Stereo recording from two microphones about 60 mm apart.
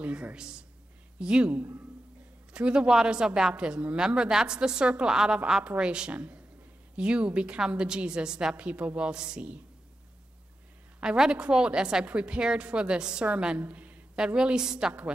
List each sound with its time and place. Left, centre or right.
0.0 s a woman's voice: right
11.0 s a woman's voice: centre
13.6 s speech: right
14.1 s a woman's voice: centre